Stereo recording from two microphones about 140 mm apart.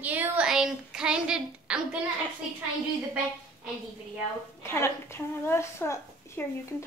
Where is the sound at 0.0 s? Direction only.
10° right (ahead or behind).